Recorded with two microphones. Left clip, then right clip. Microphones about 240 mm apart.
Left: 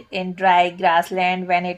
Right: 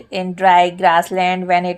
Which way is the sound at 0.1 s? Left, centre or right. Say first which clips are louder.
Right 4 dB; right.